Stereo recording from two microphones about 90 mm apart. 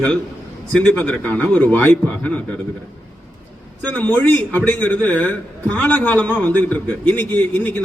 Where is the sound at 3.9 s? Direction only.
20° left (ahead or behind).